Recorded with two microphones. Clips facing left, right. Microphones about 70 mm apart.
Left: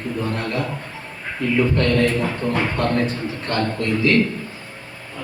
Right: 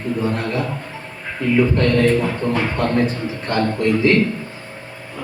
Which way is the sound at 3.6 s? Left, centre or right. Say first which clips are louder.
Right 4 dB; right.